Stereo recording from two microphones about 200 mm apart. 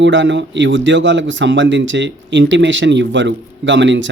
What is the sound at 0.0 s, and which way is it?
A man's voice, 65° right (ahead or behind).